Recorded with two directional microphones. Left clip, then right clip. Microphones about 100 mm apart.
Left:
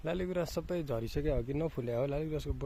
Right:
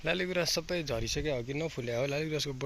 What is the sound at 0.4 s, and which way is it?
Speech, 35° left (ahead or behind).